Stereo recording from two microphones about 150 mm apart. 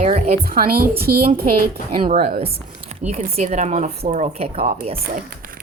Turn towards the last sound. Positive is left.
turn(degrees=-40)  # may be behind; listen again after turning